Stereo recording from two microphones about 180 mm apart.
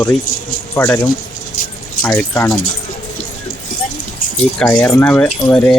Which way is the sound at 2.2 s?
15° left (ahead or behind).